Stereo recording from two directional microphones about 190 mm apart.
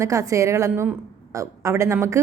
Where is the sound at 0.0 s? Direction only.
15° right (ahead or behind).